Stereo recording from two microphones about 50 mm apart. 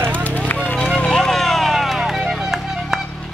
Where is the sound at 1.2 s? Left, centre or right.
Centre.